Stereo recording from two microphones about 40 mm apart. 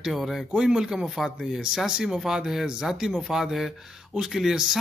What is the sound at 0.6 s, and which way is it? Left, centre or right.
Speech, centre.